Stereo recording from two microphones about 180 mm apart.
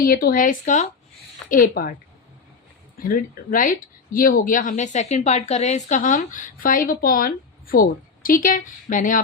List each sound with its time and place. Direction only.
0.0 s speech: 55° left (ahead or behind)
3.0 s speech: 50° left (ahead or behind)